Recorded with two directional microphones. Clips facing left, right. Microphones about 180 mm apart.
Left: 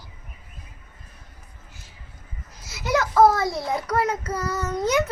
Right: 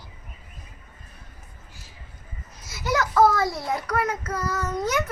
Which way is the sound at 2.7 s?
20° left (ahead or behind).